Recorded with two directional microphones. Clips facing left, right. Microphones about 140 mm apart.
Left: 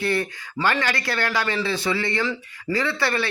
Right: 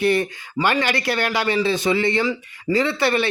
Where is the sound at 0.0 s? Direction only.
20° right (ahead or behind).